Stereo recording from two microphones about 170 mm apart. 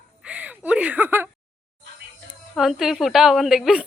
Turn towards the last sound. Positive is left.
turn(degrees=0)  # may be behind; listen again after turning